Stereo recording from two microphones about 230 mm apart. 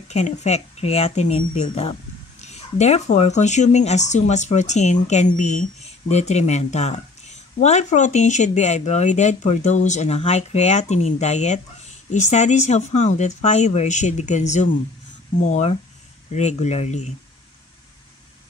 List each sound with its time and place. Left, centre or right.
0.1 s speech: left